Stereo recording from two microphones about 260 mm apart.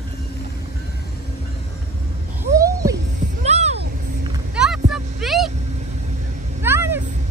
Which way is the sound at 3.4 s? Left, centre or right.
Right.